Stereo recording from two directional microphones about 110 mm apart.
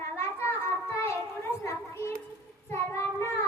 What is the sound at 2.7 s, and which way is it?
Child singing, 25° left (ahead or behind).